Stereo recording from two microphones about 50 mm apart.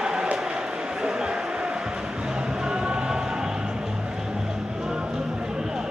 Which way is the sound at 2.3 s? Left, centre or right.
Centre.